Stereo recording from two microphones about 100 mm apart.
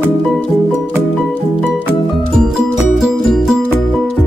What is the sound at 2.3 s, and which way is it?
Music, 5° right (ahead or behind).